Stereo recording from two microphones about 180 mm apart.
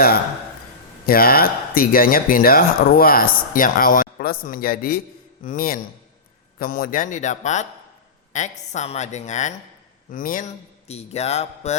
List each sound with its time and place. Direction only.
1.0 s speech: 55° left (ahead or behind)
10.8 s speech: 35° left (ahead or behind)